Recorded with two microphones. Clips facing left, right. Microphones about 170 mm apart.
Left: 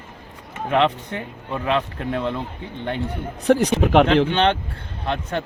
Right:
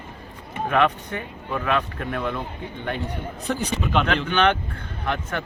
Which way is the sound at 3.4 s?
75° left (ahead or behind).